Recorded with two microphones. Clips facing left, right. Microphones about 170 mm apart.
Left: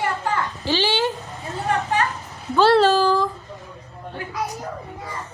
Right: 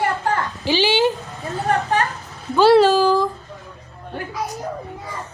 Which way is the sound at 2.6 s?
10° right (ahead or behind).